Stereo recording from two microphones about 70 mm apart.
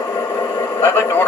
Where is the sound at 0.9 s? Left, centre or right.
Left.